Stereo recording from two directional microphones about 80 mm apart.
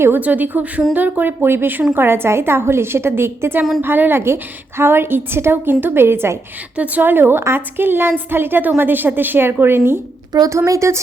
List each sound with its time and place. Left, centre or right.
0.2 s a woman's voice: right
6.7 s a woman's voice: centre
10.5 s a woman's voice: right